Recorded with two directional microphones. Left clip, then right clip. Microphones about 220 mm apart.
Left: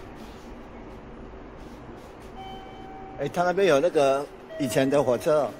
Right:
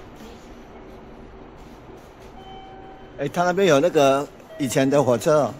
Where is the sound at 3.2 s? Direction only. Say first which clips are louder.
Right 3 dB; 10° right (ahead or behind).